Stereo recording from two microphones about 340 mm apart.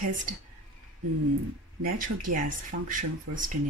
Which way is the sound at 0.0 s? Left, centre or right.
Right.